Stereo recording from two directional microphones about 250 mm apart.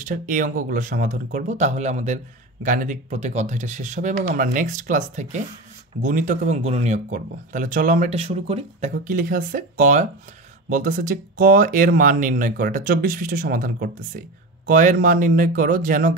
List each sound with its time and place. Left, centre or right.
0.0 s speech: right